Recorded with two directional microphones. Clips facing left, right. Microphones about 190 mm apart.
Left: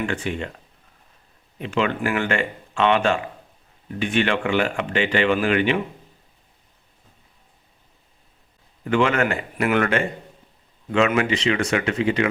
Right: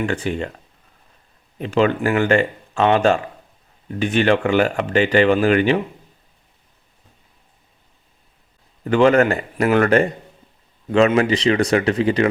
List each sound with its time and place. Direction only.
0.0 s speech: 40° right (ahead or behind)
1.5 s speech: 40° right (ahead or behind)
8.8 s speech: 35° right (ahead or behind)